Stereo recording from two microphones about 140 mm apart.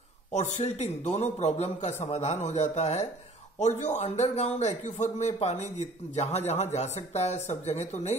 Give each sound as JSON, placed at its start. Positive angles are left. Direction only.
{"t": 0.3, "sound": "a man's voice", "side_deg": 50}